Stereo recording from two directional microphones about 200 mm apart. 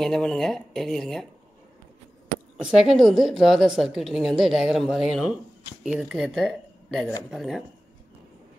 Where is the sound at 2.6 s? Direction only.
Centre (ahead or behind).